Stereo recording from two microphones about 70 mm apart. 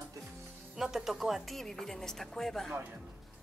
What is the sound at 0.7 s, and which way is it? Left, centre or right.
Speech, centre.